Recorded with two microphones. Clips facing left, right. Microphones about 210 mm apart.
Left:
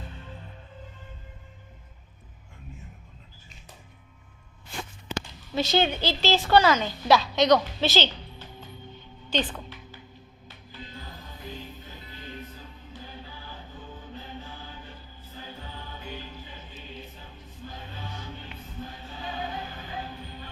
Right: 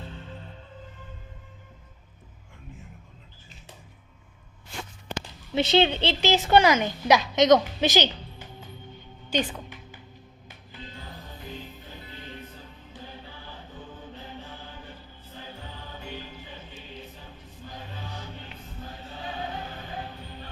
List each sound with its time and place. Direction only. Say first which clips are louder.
5.5 s a woman's voice: right 3 dB; 25° right (ahead or behind)
9.3 s music: right 1 dB; 10° right (ahead or behind)